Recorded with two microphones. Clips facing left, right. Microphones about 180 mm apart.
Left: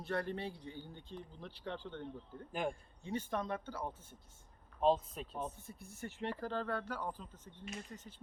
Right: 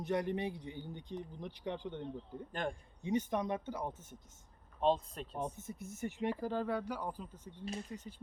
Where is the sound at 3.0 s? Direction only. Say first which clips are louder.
Right 5 dB; 15° right (ahead or behind).